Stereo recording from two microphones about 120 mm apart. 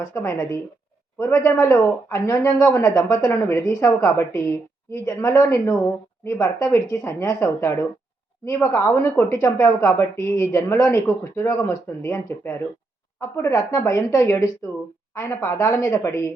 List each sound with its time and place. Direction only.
0.0 s speech: 25° left (ahead or behind)